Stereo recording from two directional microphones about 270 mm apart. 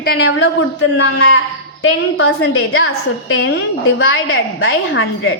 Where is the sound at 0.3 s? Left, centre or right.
Left.